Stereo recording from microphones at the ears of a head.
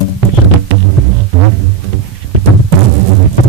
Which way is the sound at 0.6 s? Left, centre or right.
Right.